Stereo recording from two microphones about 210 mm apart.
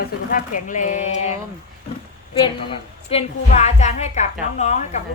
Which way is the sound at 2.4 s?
25° left (ahead or behind).